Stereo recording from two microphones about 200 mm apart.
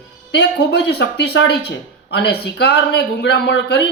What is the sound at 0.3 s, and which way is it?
Speech, 60° left (ahead or behind).